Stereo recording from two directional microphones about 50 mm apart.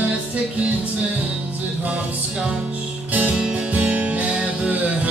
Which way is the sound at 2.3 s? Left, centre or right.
Centre.